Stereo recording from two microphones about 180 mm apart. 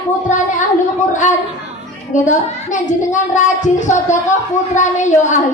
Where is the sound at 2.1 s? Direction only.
45° left (ahead or behind).